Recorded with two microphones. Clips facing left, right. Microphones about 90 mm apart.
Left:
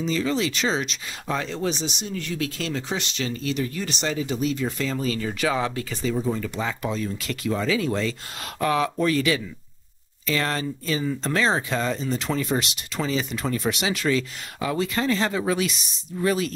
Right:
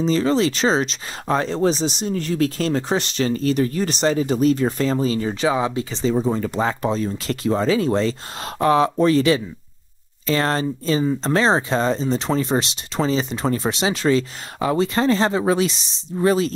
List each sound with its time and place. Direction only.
0.0 s speech: 35° right (ahead or behind)